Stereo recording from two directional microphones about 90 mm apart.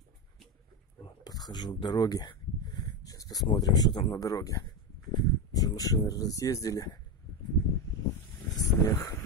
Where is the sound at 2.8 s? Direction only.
45° left (ahead or behind).